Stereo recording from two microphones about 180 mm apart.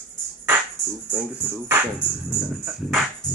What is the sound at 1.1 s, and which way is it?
Speech, 10° right (ahead or behind).